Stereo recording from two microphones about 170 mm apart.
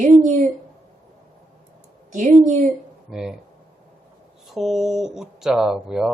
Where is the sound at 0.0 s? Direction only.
45° right (ahead or behind).